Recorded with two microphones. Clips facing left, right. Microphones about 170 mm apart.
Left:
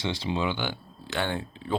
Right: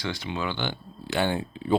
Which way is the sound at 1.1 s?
10° right (ahead or behind).